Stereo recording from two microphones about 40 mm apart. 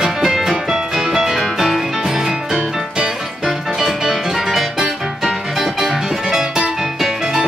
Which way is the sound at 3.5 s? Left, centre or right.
Centre.